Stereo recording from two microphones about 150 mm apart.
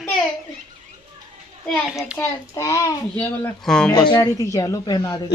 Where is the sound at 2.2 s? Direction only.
20° left (ahead or behind); by 3.9 s 5° left (ahead or behind).